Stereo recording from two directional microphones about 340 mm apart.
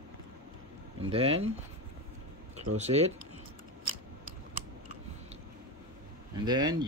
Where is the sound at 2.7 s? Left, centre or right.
Centre.